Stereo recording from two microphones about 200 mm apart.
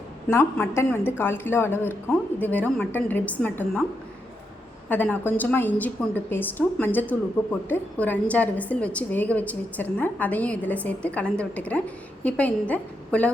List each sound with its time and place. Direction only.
0.3 s a woman's voice: 15° left (ahead or behind)
4.9 s a woman's voice: 10° left (ahead or behind)